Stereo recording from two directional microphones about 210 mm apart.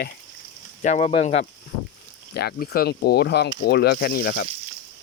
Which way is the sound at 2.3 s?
50° left (ahead or behind).